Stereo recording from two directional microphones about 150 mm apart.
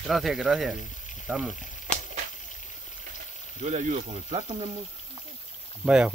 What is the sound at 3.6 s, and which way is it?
Stir, 50° right (ahead or behind).